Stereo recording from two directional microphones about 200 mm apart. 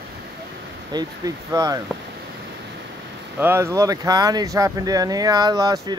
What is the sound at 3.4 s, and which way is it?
Speech, 15° right (ahead or behind).